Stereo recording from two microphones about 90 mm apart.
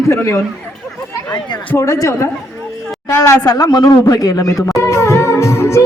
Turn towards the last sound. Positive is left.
turn(degrees=35)  # may be behind; listen again after turning